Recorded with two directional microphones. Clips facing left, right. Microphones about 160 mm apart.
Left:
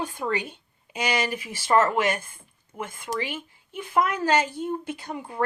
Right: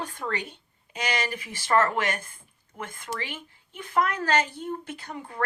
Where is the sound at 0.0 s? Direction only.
10° left (ahead or behind).